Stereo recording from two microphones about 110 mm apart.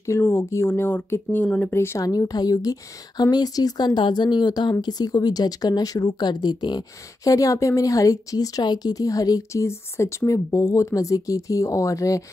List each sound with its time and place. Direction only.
0.0 s speech: 25° left (ahead or behind); by 6.8 s 40° left (ahead or behind)
7.2 s speech: 30° left (ahead or behind)